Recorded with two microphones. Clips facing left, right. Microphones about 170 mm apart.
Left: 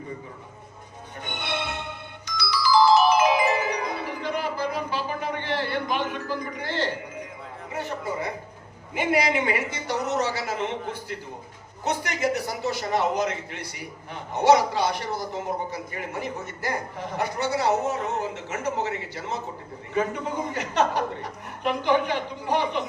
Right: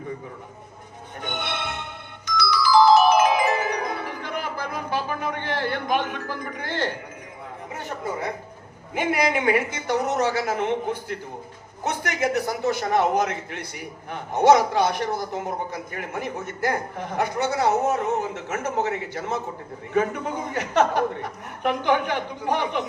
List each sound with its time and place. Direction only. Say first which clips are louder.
1.2 s music: right 1 dB; 55° right (ahead or behind)
9.0 s a man's voice: even; 50° right (ahead or behind)
11.8 s a man's voice: right 1 dB; 55° right (ahead or behind)